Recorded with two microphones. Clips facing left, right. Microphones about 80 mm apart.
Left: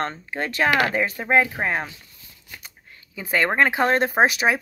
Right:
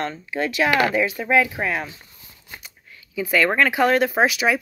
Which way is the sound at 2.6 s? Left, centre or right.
Left.